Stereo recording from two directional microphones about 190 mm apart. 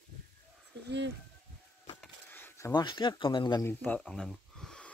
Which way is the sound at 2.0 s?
10° left (ahead or behind).